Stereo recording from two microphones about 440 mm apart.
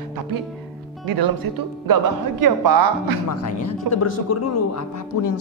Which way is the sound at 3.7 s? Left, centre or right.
Left.